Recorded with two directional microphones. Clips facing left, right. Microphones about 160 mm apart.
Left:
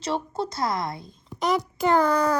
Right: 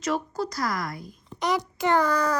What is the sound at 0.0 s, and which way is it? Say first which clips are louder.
A woman's voice: even; 30° left (ahead or behind).